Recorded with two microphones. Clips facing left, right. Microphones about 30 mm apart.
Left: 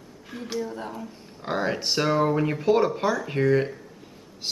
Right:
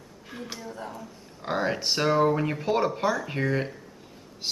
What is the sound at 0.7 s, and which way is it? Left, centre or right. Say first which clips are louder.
Speech: left 3 dB; left.